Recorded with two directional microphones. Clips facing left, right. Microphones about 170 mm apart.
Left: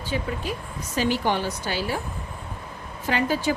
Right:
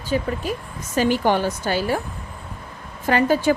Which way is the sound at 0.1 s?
45° right (ahead or behind).